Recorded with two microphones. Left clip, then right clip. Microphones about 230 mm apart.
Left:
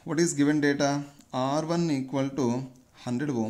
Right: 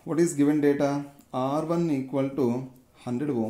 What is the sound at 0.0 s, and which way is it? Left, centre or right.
Speech, centre.